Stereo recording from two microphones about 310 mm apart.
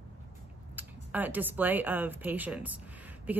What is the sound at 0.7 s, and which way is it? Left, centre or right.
A woman's voice, centre.